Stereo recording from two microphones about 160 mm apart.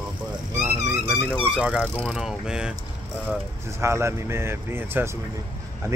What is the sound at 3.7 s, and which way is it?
Speech, 15° right (ahead or behind).